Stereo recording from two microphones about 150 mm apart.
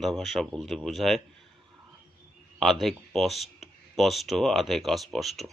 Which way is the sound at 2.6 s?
Centre (ahead or behind).